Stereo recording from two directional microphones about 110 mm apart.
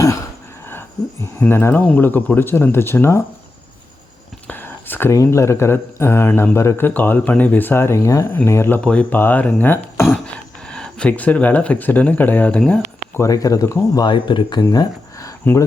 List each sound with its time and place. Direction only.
0.7 s speech: 20° left (ahead or behind)
4.4 s whispering: 20° left (ahead or behind)
5.1 s speech: 30° left (ahead or behind)
8.8 s speech: 10° left (ahead or behind)
10.7 s speech: 10° left (ahead or behind)
13.1 s speech: 30° left (ahead or behind)
14.1 s speech: 45° left (ahead or behind)